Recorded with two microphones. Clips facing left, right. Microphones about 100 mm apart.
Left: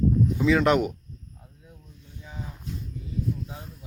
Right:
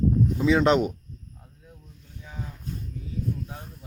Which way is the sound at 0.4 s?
25° right (ahead or behind).